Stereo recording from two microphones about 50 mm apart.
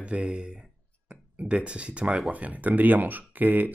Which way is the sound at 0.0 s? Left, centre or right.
Right.